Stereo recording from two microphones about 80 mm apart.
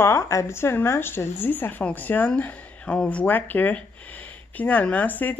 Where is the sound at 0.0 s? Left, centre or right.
Left.